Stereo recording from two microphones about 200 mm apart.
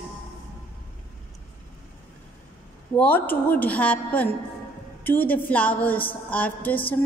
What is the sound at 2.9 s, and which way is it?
A woman's voice, 10° left (ahead or behind).